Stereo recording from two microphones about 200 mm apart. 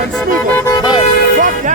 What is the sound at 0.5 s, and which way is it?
Speech, 10° left (ahead or behind).